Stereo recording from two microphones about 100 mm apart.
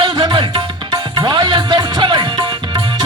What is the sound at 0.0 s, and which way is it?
Music, 50° right (ahead or behind).